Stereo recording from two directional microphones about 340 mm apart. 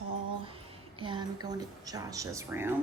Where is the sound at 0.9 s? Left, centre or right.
Centre.